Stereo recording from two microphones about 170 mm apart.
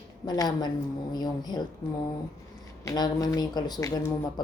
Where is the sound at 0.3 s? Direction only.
25° left (ahead or behind).